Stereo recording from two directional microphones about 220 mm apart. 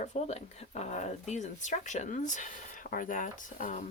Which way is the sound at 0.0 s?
30° left (ahead or behind).